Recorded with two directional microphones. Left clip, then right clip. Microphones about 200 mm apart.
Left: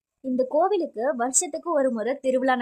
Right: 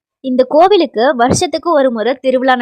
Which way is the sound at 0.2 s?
35° right (ahead or behind).